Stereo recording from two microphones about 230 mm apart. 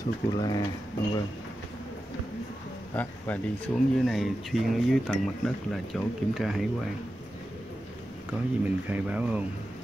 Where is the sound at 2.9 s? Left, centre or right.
Centre.